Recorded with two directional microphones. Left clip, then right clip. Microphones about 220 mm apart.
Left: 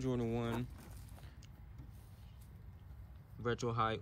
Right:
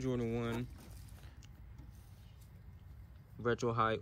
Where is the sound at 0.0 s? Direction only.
20° left (ahead or behind).